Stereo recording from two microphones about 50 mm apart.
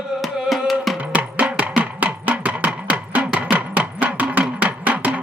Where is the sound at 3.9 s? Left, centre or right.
Right.